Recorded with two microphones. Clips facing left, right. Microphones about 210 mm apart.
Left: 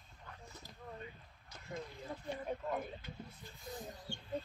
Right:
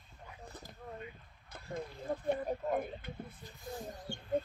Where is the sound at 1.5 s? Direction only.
55° right (ahead or behind).